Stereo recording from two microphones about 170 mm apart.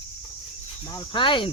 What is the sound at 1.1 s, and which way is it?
Speech, 30° left (ahead or behind).